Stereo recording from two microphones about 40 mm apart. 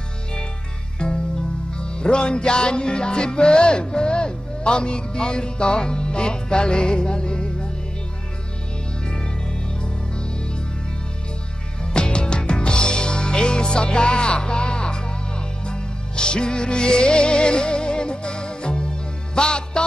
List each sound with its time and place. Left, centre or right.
0.9 s music: left
11.8 s music: left